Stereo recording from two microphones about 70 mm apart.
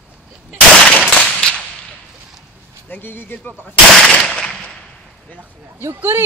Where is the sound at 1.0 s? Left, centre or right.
Centre.